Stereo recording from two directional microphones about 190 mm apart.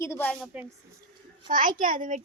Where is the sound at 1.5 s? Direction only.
45° right (ahead or behind).